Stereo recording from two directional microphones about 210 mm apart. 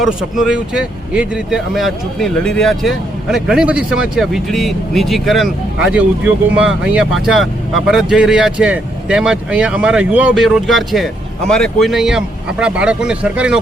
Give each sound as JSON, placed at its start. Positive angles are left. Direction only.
{"t": 0.0, "sound": "speech", "side_deg": 0}